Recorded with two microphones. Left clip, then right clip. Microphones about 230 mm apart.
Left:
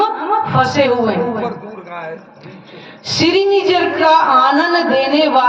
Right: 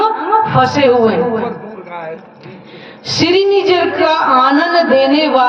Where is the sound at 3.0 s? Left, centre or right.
Right.